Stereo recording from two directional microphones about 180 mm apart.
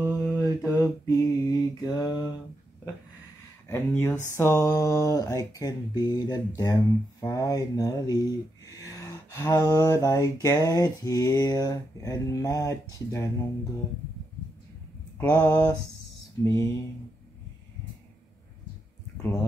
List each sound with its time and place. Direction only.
0.0 s mantra: 10° right (ahead or behind)
1.0 s mantra: 20° left (ahead or behind)
3.6 s speech: 15° left (ahead or behind)
15.1 s speech: 10° left (ahead or behind)